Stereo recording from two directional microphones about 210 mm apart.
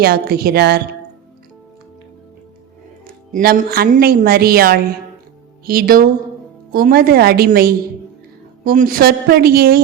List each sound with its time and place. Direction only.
0.0 s a woman's voice: 45° right (ahead or behind)
3.3 s a woman's voice: 45° right (ahead or behind)